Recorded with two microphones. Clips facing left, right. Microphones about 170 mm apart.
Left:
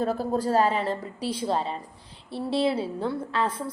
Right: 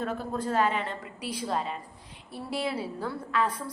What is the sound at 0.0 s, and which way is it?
A woman's voice, 35° left (ahead or behind).